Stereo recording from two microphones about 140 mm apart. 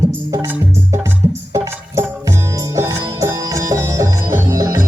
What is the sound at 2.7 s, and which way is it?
Music, 20° right (ahead or behind).